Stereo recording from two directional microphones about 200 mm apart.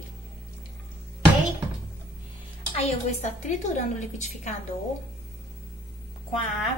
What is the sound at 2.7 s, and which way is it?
A woman's voice, 30° left (ahead or behind).